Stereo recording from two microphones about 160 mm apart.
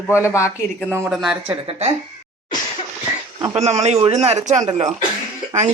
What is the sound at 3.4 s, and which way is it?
A man's voice, 40° right (ahead or behind).